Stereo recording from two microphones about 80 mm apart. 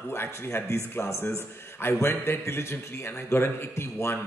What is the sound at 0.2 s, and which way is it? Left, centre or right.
Speech, left.